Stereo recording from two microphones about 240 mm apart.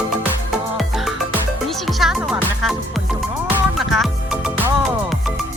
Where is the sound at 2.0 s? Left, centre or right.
Centre.